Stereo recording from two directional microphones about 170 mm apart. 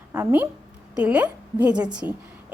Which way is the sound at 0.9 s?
5° right (ahead or behind).